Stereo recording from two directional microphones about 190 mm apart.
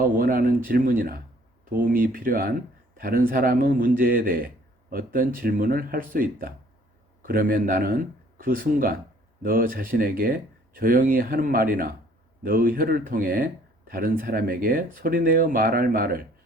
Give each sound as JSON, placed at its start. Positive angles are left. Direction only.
{"t": 0.0, "sound": "speech", "side_deg": -50}